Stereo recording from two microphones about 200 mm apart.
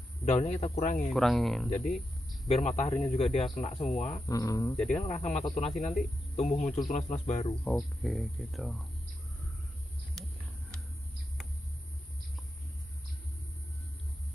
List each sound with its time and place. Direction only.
0.2 s speech: 35° left (ahead or behind)
1.1 s speech: centre (ahead or behind)
2.4 s speech: 30° left (ahead or behind)
4.3 s speech: 15° left (ahead or behind)
4.7 s speech: 5° left (ahead or behind)
5.0 s speech: 35° left (ahead or behind)
7.6 s speech: centre (ahead or behind)